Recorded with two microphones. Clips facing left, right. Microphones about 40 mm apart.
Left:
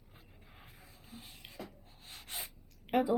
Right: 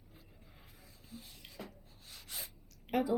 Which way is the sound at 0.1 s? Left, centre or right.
Left.